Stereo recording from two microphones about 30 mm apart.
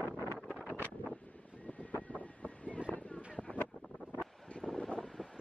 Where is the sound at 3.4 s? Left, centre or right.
Left.